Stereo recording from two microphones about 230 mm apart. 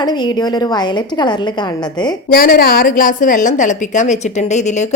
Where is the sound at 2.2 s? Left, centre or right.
Left.